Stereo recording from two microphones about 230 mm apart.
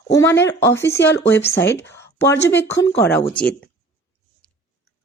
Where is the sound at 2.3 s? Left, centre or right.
Left.